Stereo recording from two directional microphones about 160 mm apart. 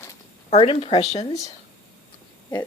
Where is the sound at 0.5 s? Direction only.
35° left (ahead or behind).